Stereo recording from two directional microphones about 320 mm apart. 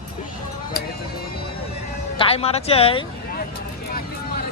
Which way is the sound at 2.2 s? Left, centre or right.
Centre.